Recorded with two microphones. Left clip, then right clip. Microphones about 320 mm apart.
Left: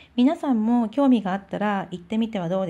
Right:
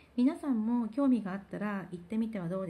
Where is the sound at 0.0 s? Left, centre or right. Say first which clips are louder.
Left 10 dB; centre.